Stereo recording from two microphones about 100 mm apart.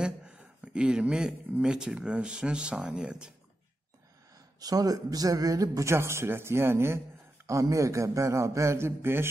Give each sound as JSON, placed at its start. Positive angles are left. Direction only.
{"t": 0.0, "sound": "speech", "side_deg": -10}
{"t": 4.6, "sound": "a man's voice", "side_deg": -40}